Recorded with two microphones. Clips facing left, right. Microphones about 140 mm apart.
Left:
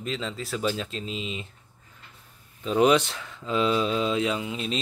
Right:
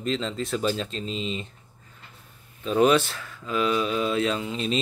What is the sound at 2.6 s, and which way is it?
Speech, 15° left (ahead or behind).